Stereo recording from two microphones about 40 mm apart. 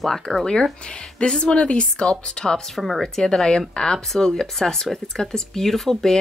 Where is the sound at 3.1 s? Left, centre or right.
Centre.